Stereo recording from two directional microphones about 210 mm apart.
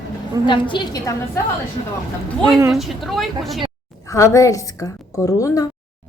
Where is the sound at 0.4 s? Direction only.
20° left (ahead or behind).